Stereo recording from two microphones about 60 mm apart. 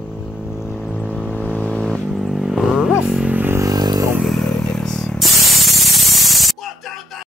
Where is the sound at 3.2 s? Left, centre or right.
Right.